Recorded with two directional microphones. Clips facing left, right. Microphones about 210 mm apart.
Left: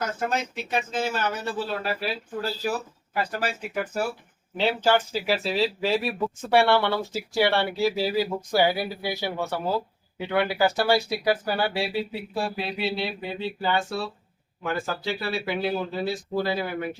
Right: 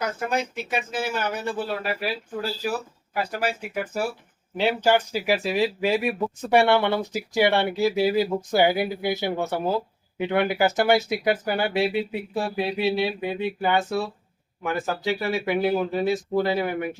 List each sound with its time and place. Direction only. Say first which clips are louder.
0.0 s speech: right 1 dB; 10° right (ahead or behind)